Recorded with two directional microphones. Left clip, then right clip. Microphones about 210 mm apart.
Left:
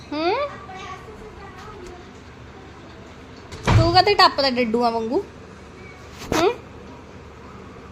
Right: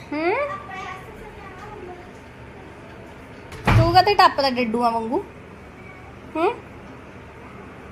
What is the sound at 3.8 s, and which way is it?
A woman's voice, 10° left (ahead or behind).